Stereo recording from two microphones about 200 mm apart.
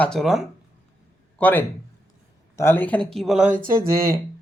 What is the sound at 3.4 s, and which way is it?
Speech, 40° right (ahead or behind).